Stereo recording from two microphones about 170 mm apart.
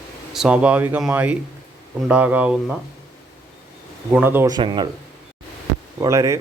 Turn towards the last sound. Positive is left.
turn(degrees=-20)  # may be behind; listen again after turning